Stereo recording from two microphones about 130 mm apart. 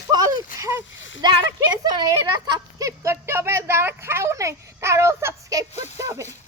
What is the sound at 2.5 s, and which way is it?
A child's voice, 25° right (ahead or behind).